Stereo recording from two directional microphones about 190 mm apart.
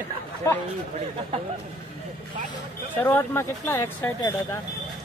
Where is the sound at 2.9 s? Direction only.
10° left (ahead or behind).